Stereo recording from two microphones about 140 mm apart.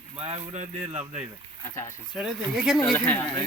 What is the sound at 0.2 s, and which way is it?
Speech, 50° right (ahead or behind).